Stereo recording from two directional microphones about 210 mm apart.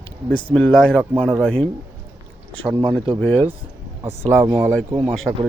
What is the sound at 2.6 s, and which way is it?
Speech, 20° right (ahead or behind).